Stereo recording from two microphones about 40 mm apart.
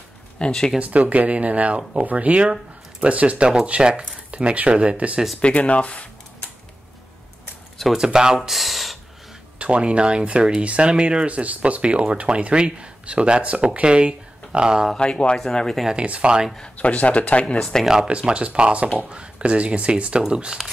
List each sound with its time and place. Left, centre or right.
0.4 s speech: centre
0.7 s speech: right
5.4 s speech: left
7.9 s speech: centre
8.4 s speech: centre
9.6 s speech: right
15.0 s speech: left
16.1 s speech: right
16.7 s speech: left
17.6 s speech: centre
18.0 s speech: right
20.2 s speech: centre